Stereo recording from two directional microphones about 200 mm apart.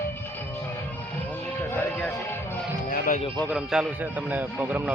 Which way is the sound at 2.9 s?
40° left (ahead or behind).